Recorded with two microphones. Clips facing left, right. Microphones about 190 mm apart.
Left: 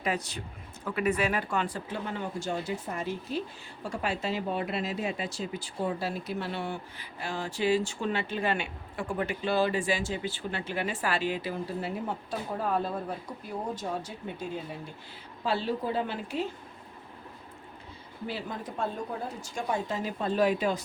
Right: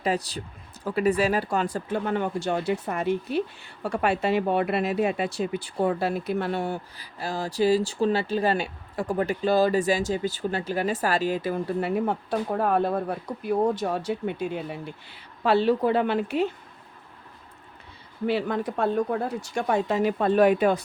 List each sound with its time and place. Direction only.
0.0 s a woman's voice: 35° right (ahead or behind); by 16.5 s 65° right (ahead or behind)
18.3 s speech: 70° right (ahead or behind)